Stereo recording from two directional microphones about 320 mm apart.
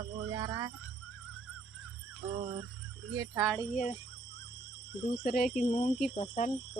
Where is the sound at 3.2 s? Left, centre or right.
Centre.